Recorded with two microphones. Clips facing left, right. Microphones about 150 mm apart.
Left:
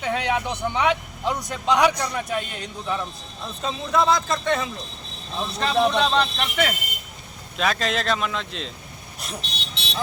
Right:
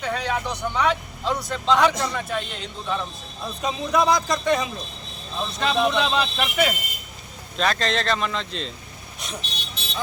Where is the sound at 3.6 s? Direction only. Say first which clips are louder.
Right 1 dB; 15° right (ahead or behind).